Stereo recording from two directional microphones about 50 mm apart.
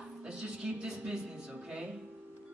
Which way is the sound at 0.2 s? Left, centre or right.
Centre.